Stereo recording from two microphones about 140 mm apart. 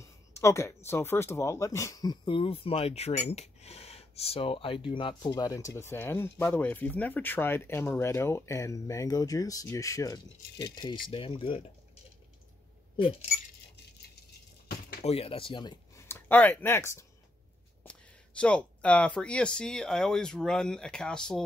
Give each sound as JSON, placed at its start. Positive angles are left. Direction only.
{"t": 0.4, "sound": "speech", "side_deg": 20}
{"t": 14.7, "sound": "a sound", "side_deg": 90}
{"t": 15.0, "sound": "speech", "side_deg": 45}
{"t": 16.1, "sound": "speech", "side_deg": 10}